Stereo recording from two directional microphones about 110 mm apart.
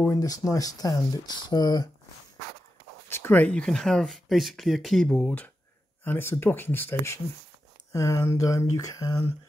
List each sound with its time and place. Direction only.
0.1 s speech: 35° left (ahead or behind)
3.1 s speech: 20° left (ahead or behind)
6.0 s speech: 20° left (ahead or behind)